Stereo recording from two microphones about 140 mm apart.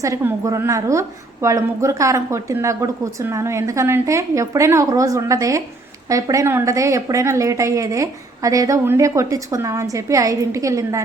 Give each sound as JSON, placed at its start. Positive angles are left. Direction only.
{"t": 0.0, "sound": "a woman's voice", "side_deg": -20}